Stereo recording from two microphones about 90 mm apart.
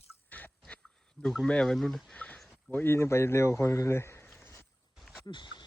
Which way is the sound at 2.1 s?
15° left (ahead or behind).